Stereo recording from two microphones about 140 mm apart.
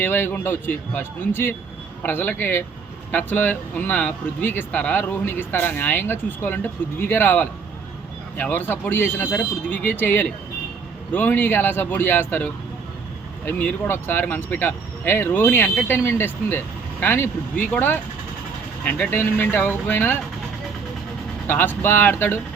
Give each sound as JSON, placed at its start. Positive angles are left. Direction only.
{"t": 0.0, "sound": "speech", "side_deg": 15}
{"t": 21.4, "sound": "speech", "side_deg": 15}